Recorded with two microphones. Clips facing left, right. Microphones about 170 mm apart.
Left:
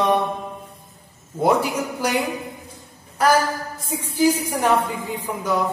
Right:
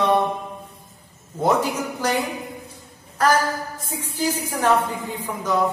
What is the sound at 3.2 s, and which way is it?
Speech, 10° left (ahead or behind).